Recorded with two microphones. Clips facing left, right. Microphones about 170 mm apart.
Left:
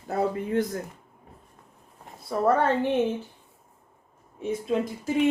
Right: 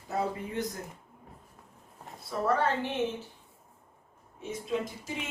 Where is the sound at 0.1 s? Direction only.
55° left (ahead or behind).